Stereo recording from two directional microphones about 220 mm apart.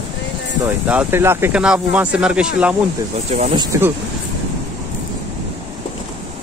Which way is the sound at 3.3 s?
30° right (ahead or behind).